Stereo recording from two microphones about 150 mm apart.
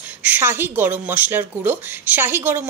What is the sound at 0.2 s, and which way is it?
A woman's voice, 15° right (ahead or behind).